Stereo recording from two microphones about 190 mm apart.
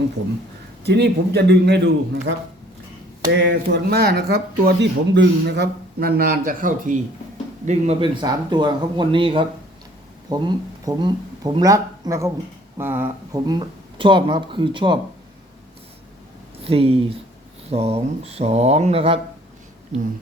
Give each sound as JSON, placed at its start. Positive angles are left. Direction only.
{"t": 0.9, "sound": "speech", "side_deg": -60}
{"t": 3.4, "sound": "speech", "side_deg": -70}
{"t": 7.7, "sound": "speech", "side_deg": -30}
{"t": 16.6, "sound": "speech", "side_deg": -30}